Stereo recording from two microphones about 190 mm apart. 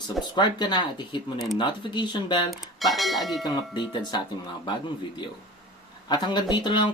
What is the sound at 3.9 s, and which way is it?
Speech, 25° left (ahead or behind).